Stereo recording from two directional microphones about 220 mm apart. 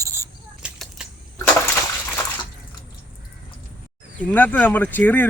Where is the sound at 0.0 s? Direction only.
15° right (ahead or behind).